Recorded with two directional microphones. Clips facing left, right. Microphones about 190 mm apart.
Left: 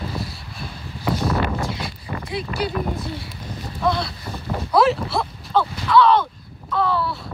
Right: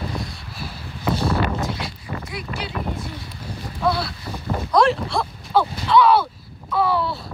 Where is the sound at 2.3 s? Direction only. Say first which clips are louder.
Left 9 dB; 35° left (ahead or behind).